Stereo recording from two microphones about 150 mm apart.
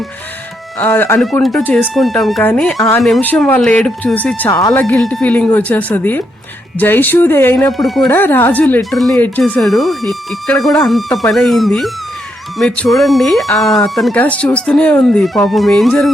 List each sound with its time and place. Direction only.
0.8 s speech: 10° left (ahead or behind)
1.2 s speech: centre (ahead or behind)
2.4 s speech: 10° left (ahead or behind)
3.2 s speech: 10° left (ahead or behind)
7.7 s speech: centre (ahead or behind)
8.1 s speech: 15° left (ahead or behind)
8.8 s speech: centre (ahead or behind)
9.1 s speech: 10° left (ahead or behind)